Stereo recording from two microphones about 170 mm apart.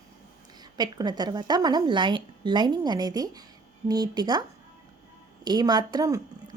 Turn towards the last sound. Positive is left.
turn(degrees=-20)  # may be behind; listen again after turning